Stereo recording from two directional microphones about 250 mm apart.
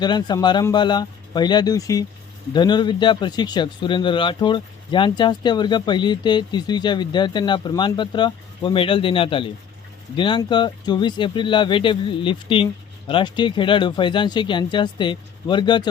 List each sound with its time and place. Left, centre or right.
0.0 s speech: centre